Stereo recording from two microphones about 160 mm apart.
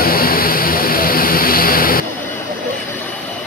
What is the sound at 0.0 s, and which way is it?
Vehicle, 70° left (ahead or behind).